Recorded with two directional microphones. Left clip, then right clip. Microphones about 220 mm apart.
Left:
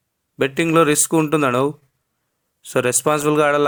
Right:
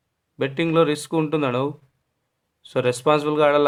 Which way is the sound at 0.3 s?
25° left (ahead or behind).